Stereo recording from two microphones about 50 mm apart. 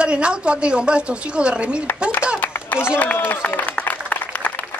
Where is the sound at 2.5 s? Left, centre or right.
Left.